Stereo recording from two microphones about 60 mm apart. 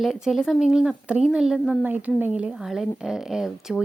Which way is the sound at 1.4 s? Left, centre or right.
Centre.